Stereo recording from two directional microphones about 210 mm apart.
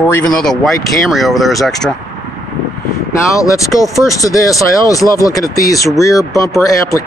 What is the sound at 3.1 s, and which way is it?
Speech, 15° left (ahead or behind).